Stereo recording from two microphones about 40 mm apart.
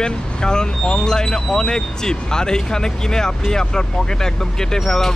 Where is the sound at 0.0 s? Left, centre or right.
Centre.